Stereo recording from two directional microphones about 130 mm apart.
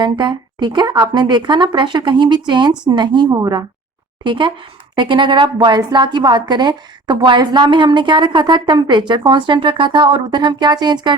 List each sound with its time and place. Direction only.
0.0 s a woman's voice: 35° right (ahead or behind)